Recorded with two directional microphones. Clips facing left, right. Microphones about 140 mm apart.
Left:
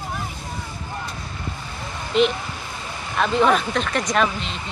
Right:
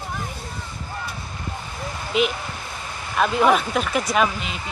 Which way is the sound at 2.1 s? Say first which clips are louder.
Left 3 dB; 5° right (ahead or behind).